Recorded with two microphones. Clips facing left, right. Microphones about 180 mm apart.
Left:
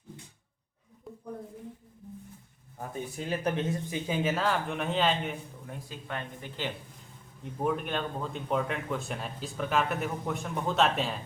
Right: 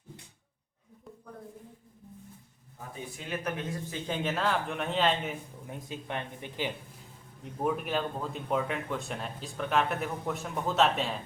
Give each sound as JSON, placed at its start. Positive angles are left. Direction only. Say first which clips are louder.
{"t": 3.2, "sound": "speech", "louder": "left 4 dB", "side_deg": 30}
{"t": 3.8, "sound": "speech", "louder": "left 3 dB", "side_deg": 10}
{"t": 5.6, "sound": "speech", "louder": "right 5 dB", "side_deg": -20}
{"t": 7.6, "sound": "speech", "louder": "even", "side_deg": -5}